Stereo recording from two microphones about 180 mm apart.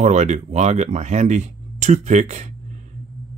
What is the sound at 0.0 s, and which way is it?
Speech, 40° right (ahead or behind).